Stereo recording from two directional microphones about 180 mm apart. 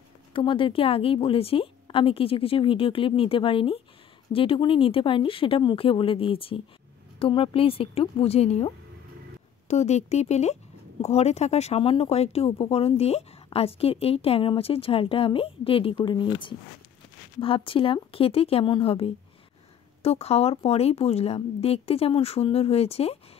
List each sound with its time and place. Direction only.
0.3 s speech: 30° left (ahead or behind)